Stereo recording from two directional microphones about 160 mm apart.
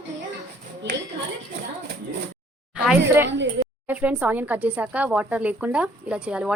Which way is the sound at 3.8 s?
10° right (ahead or behind).